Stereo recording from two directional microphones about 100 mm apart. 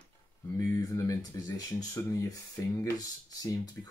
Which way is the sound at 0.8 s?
35° left (ahead or behind).